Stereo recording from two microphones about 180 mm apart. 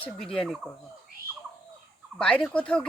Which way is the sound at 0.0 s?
5° left (ahead or behind).